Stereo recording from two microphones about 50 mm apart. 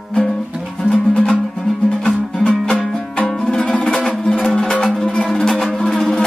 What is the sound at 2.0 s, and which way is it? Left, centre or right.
Music, centre.